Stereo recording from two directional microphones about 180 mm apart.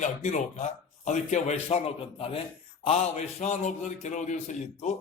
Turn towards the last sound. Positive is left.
turn(degrees=40)  # may be behind; listen again after turning